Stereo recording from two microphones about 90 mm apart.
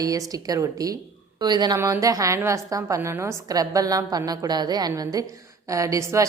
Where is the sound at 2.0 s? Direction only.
40° right (ahead or behind).